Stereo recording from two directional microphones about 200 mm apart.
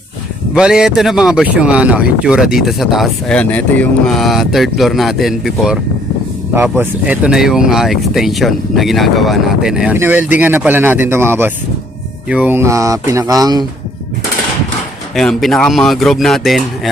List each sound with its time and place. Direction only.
0.5 s speech: 5° right (ahead or behind); by 13.7 s 20° right (ahead or behind)
15.1 s speech: centre (ahead or behind)